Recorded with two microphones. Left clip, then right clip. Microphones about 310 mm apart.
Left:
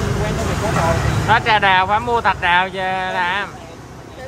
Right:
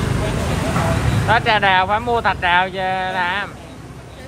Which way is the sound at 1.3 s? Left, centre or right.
Centre.